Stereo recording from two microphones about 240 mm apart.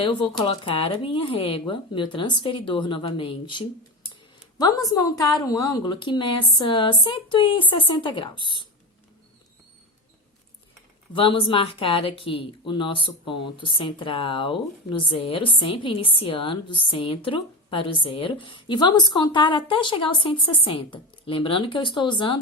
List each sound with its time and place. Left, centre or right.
0.0 s speech: left
11.1 s speech: left